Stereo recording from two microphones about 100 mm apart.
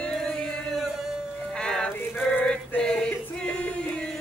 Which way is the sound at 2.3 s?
15° left (ahead or behind).